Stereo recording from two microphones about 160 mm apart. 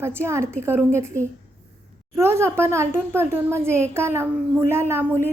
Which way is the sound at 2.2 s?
15° right (ahead or behind).